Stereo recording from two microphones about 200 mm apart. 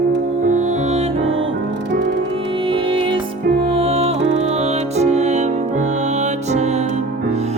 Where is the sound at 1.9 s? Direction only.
60° right (ahead or behind).